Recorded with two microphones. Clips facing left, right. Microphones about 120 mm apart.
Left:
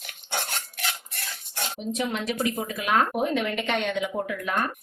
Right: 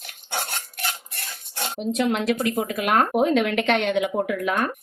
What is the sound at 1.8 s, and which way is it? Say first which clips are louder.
Speech: right 6 dB; 80° right.